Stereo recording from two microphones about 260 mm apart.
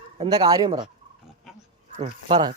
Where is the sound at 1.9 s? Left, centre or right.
Centre.